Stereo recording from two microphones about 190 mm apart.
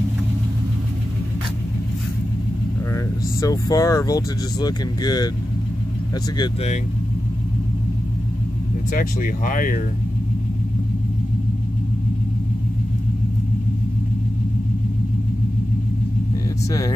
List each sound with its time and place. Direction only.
2.9 s speech: 15° left (ahead or behind)
8.9 s speech: 45° left (ahead or behind)